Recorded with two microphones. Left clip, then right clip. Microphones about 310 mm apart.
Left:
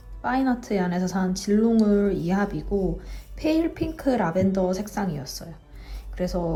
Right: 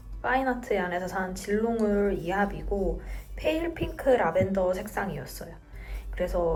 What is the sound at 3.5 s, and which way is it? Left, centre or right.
Speech, centre.